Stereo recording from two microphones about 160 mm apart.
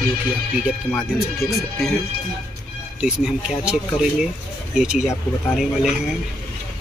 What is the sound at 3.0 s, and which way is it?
Speech, 5° right (ahead or behind).